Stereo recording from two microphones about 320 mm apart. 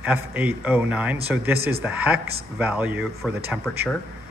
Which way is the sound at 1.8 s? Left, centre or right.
Centre.